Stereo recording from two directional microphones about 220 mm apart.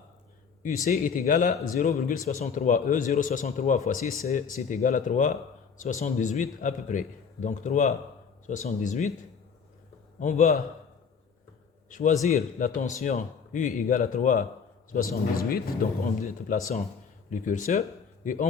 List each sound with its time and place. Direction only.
0.9 s speech: 40° left (ahead or behind)
10.2 s speech: 30° left (ahead or behind)
11.9 s a man's voice: 35° left (ahead or behind)